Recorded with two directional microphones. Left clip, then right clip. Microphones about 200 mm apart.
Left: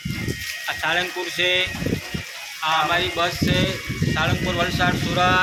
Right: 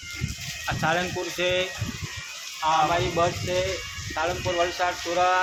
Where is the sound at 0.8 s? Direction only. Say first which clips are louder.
Left 2 dB; 40° right (ahead or behind).